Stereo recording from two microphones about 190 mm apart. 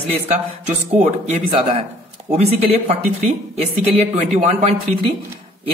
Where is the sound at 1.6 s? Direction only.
30° right (ahead or behind).